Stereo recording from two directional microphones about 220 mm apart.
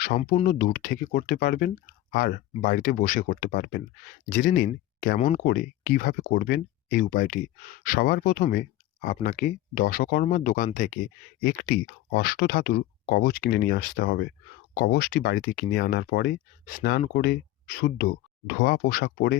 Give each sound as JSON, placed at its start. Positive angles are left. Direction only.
{"t": 0.4, "sound": "speech", "side_deg": 40}
{"t": 5.5, "sound": "speech", "side_deg": 45}